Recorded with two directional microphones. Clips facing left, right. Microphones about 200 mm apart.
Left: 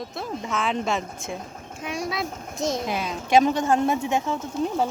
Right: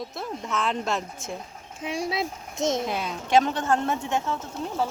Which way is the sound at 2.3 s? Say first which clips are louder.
Left 4 dB; 50° left (ahead or behind).